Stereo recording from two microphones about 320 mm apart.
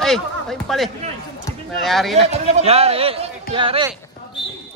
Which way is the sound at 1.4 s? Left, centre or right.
Centre.